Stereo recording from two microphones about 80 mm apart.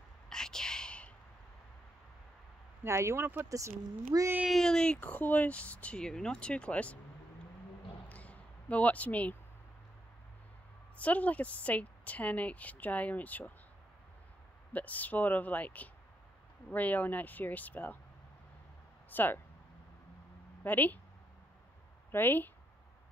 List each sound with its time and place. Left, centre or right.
0.3 s whispering: centre
2.8 s speech: right
4.5 s speech: centre
8.1 s a sound: centre
11.0 s a woman's voice: centre
14.7 s a woman's voice: centre
19.0 s speech: left
20.6 s a woman's voice: left
22.1 s a woman's voice: left